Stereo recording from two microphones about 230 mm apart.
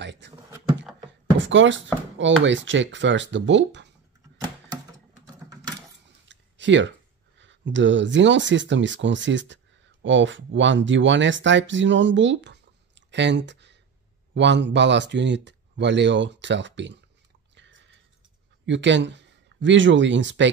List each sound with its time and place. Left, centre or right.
0.0 s speech: right
1.4 s speech: right
5.2 s typing: centre
6.2 s a sound: right
7.3 s speech: right
17.6 s a sound: right
18.7 s speech: right